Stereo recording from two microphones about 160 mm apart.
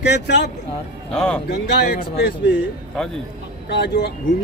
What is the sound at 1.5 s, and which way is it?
Speech, 90° left.